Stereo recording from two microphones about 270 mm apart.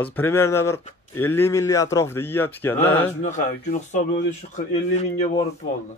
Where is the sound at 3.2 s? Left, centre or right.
Left.